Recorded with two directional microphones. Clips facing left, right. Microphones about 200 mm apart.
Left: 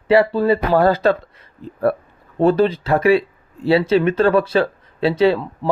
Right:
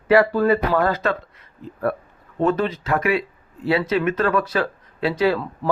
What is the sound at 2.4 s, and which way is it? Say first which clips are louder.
Speech: left 6 dB; 35° left (ahead or behind).